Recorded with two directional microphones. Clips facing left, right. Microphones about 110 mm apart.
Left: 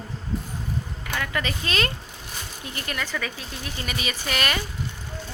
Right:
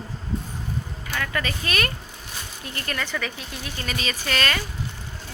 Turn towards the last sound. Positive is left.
turn(degrees=15)  # may be behind; listen again after turning